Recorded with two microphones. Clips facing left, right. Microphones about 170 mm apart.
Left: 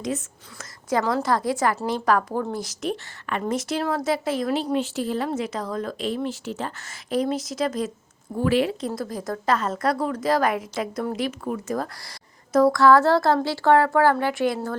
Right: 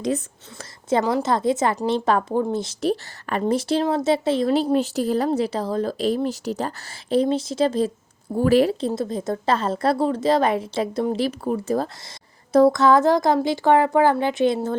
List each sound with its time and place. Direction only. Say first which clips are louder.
0.6 s a woman's voice: right 3 dB; 25° right (ahead or behind)
4.7 s speech: right 4 dB; 40° right (ahead or behind)
8.4 s speech: right 4 dB; 40° right (ahead or behind)
8.9 s a woman's voice: right 4 dB; 25° right (ahead or behind)